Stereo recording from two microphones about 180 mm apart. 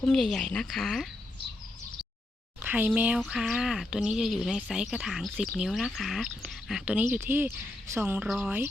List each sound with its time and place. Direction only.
0.0 s speech: 5° left (ahead or behind)
2.6 s speech: 10° right (ahead or behind)